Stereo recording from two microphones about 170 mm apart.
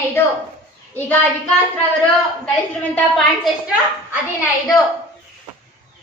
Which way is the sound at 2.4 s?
10° left (ahead or behind).